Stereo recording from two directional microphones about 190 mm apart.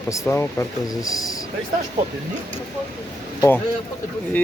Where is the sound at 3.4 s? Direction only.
10° left (ahead or behind).